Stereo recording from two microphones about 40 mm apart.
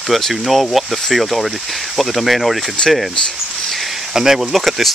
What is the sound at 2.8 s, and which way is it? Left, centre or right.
Speech, centre.